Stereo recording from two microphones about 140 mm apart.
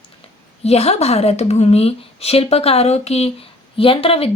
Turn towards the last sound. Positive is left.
turn(degrees=45)  # may be behind; listen again after turning